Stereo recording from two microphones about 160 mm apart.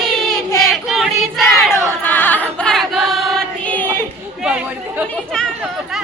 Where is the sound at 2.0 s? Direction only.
10° left (ahead or behind).